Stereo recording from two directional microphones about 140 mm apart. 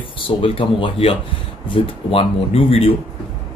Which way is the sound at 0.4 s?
40° left (ahead or behind).